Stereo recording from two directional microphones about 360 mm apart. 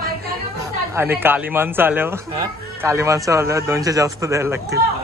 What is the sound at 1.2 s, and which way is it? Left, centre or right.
Speech, centre.